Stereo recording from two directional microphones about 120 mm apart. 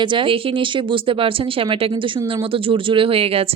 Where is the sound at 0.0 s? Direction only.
45° right (ahead or behind).